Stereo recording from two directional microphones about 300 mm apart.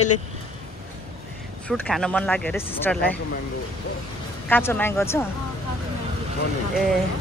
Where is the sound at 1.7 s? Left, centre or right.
Centre.